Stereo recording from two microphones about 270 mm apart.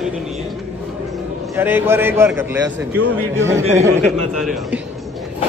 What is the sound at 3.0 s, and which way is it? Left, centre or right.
Speech, right.